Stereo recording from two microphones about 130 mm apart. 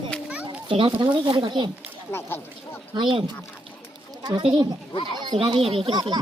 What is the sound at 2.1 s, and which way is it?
Speech, 15° left (ahead or behind).